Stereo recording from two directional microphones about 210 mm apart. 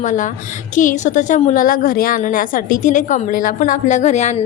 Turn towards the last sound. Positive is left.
turn(degrees=35)  # may be behind; listen again after turning